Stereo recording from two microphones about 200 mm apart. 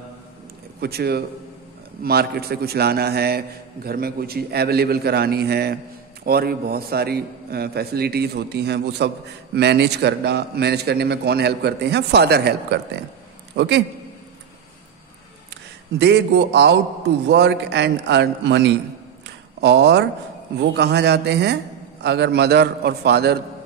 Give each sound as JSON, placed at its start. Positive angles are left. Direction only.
{"t": 0.7, "sound": "a man's voice", "side_deg": -50}
{"t": 16.0, "sound": "a man's voice", "side_deg": -60}
{"t": 19.2, "sound": "a sound", "side_deg": -60}
{"t": 20.5, "sound": "a man's voice", "side_deg": -60}